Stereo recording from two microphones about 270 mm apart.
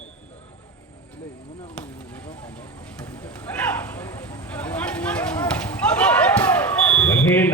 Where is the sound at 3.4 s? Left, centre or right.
Centre.